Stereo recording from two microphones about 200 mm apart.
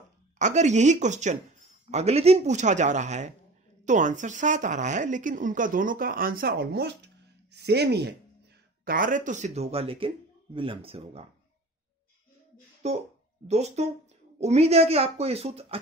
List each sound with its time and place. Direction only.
0.4 s a woman's voice: 35° right (ahead or behind); by 8.1 s 55° right (ahead or behind)
8.8 s a woman's voice: 40° right (ahead or behind)
12.8 s a woman's voice: 35° right (ahead or behind)